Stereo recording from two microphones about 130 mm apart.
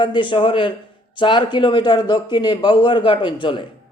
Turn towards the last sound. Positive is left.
turn(degrees=40)  # may be behind; listen again after turning